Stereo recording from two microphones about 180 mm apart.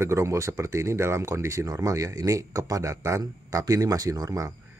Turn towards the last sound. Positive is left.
turn(degrees=-20)  # may be behind; listen again after turning